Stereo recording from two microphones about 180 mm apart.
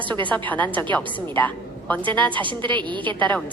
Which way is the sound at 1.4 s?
10° left (ahead or behind).